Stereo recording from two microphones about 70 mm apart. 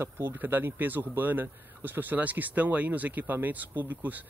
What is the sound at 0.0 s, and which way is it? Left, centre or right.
Speech, right.